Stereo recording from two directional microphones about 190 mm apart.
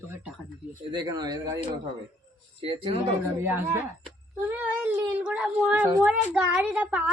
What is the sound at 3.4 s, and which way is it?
Speech, 10° right (ahead or behind).